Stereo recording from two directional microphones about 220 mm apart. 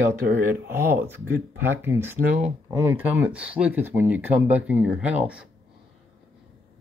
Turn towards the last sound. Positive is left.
turn(degrees=-5)  # may be behind; listen again after turning